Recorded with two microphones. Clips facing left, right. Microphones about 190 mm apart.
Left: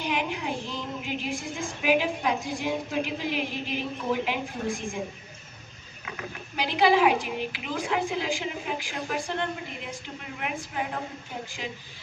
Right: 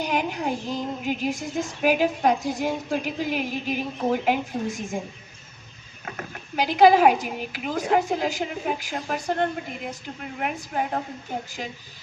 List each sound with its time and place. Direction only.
0.0 s female singing: 45° right (ahead or behind)
6.1 s female singing: 45° right (ahead or behind)